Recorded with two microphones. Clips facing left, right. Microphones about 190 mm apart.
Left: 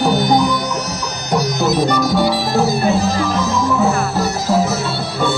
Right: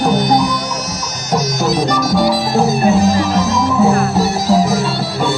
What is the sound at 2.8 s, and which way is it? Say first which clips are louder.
Music: right 4 dB; 15° right (ahead or behind).